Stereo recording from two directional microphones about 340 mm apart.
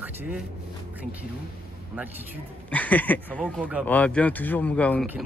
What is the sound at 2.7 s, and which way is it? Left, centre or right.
Speech, centre.